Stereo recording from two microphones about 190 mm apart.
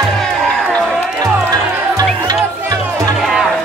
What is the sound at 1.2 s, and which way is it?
Music, 20° right (ahead or behind).